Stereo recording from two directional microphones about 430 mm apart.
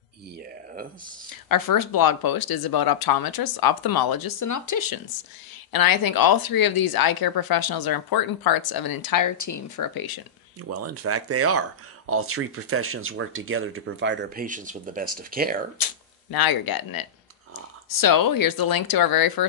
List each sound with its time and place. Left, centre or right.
1.5 s speech: left
10.7 s speech: right
15.8 s speech: left